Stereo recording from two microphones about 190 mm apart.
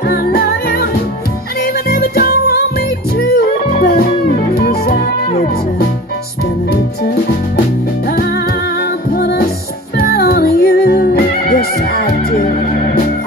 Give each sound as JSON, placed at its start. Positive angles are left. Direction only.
{"t": 0.1, "sound": "music", "side_deg": 55}
{"t": 1.9, "sound": "music", "side_deg": 55}
{"t": 5.3, "sound": "music", "side_deg": 45}
{"t": 9.1, "sound": "music", "side_deg": 55}